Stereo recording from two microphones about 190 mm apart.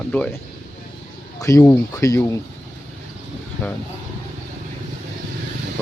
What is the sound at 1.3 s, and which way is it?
Speech, 15° left (ahead or behind).